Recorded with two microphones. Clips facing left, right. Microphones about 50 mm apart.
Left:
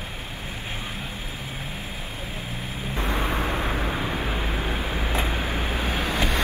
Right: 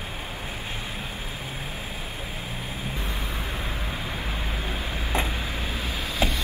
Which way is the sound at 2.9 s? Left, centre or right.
Left.